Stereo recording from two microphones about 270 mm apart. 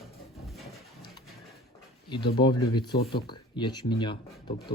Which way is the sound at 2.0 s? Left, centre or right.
Centre.